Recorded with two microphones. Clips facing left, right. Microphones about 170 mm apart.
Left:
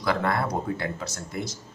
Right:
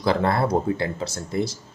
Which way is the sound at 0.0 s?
30° right (ahead or behind).